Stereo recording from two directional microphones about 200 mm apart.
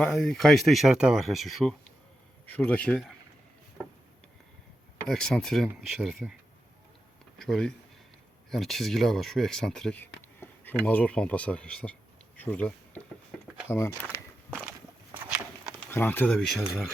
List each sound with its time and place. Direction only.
0.0 s speech: centre (ahead or behind)
5.0 s speech: 5° left (ahead or behind)
7.3 s speech: 5° left (ahead or behind)
15.9 s speech: 10° left (ahead or behind)